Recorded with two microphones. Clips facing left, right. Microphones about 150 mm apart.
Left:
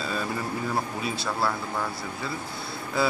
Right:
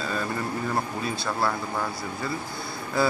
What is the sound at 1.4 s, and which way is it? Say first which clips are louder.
Speech: right 1 dB; centre (ahead or behind).